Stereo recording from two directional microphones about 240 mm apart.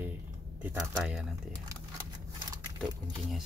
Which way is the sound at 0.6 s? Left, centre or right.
Centre.